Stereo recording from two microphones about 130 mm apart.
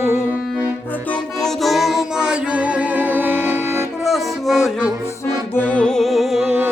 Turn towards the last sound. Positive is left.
turn(degrees=-10)  # may be behind; listen again after turning